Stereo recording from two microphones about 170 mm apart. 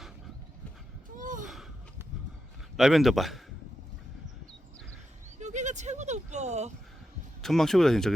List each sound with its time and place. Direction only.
1.1 s gasp: 50° right (ahead or behind)
1.5 s a sound: centre (ahead or behind)
2.7 s speech: centre (ahead or behind)
5.4 s goat: 45° right (ahead or behind)
7.4 s speech: centre (ahead or behind)